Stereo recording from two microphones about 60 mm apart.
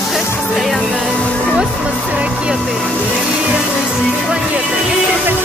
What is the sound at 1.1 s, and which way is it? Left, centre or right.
Music, centre.